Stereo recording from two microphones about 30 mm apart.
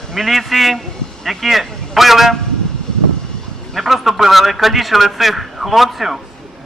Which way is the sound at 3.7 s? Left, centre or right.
Centre.